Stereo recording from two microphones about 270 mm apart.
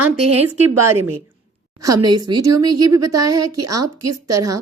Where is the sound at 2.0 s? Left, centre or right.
Centre.